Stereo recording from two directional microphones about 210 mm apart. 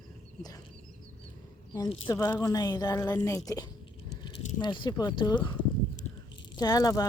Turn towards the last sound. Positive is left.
turn(degrees=15)  # may be behind; listen again after turning